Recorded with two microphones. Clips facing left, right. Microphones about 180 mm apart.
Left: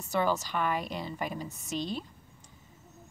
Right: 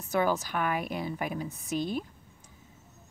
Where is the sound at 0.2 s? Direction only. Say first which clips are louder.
Right 1 dB; 10° right (ahead or behind).